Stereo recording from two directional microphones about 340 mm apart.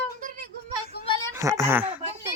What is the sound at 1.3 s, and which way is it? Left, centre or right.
Speech, centre.